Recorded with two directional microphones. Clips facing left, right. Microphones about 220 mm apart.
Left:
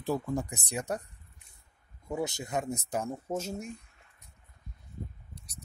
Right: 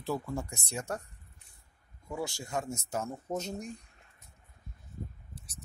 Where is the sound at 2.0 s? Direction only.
20° left (ahead or behind).